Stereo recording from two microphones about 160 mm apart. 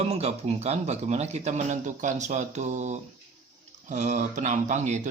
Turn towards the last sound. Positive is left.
turn(degrees=-45)  # may be behind; listen again after turning